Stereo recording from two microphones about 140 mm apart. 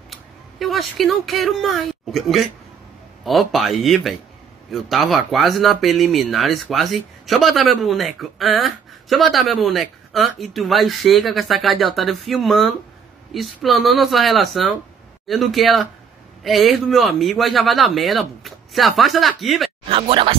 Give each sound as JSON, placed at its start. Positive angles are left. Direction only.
{"t": 0.1, "sound": "speech", "side_deg": 0}
{"t": 19.9, "sound": "speech", "side_deg": -40}